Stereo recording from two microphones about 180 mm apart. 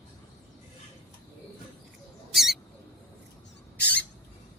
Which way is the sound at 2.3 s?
Centre (ahead or behind).